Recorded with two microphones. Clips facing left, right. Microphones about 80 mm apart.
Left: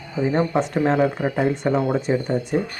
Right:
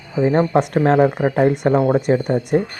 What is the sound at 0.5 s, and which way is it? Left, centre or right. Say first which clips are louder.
Speech: right 5 dB; right.